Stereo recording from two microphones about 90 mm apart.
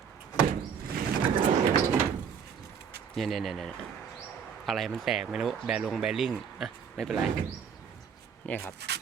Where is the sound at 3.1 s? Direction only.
Centre (ahead or behind).